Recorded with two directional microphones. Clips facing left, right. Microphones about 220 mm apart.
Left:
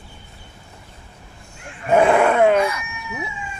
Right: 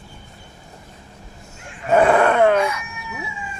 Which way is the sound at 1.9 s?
10° left (ahead or behind).